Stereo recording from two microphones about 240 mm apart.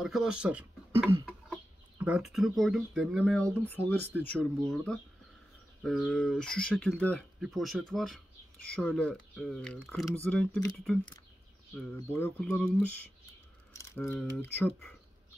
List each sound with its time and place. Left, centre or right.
0.0 s speech: centre
11.7 s speech: centre